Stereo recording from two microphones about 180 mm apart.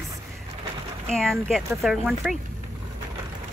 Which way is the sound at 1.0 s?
5° left (ahead or behind).